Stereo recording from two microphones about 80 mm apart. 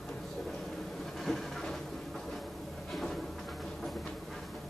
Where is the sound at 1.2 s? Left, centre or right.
Centre.